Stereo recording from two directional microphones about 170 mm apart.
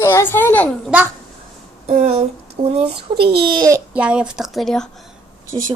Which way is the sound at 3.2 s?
25° right (ahead or behind).